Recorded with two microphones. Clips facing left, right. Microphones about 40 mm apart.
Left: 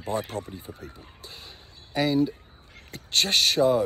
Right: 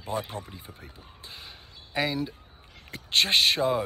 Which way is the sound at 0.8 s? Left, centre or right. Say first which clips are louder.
Left 4 dB; right.